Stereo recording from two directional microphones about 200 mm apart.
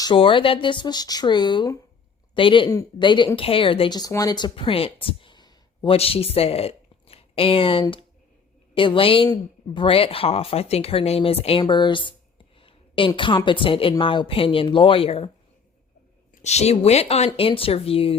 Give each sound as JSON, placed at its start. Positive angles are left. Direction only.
{"t": 0.0, "sound": "a woman's voice", "side_deg": 25}
{"t": 16.3, "sound": "speech", "side_deg": 35}